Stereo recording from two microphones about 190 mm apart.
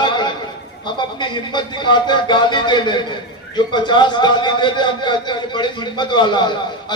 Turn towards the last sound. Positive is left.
turn(degrees=25)  # may be behind; listen again after turning